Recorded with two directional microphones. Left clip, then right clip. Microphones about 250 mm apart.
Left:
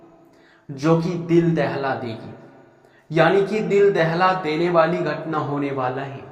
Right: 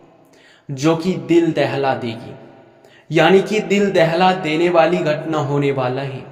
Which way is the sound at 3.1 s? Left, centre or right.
Right.